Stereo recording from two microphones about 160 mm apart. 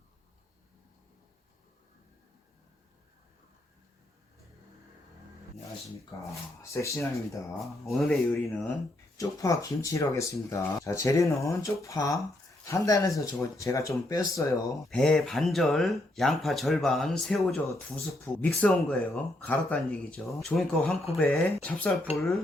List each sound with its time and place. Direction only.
6.3 s speech: 20° left (ahead or behind)
7.6 s speech: centre (ahead or behind)
9.1 s speech: 20° left (ahead or behind)
14.8 s speech: centre (ahead or behind)